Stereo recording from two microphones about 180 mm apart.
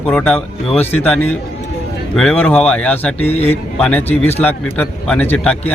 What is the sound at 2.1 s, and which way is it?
Speech, 5° left (ahead or behind).